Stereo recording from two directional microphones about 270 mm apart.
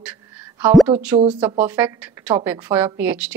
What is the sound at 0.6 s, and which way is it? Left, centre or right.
A woman's voice, centre.